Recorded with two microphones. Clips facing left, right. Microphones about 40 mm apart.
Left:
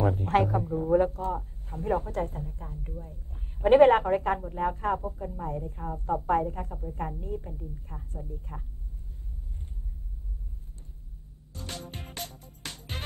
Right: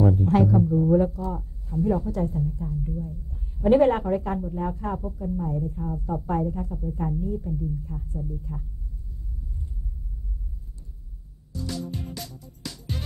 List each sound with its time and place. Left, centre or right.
0.0 s a woman's voice: left
11.5 s music: left